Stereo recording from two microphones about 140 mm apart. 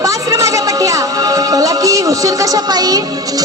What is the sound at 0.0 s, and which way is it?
Music, 25° right (ahead or behind).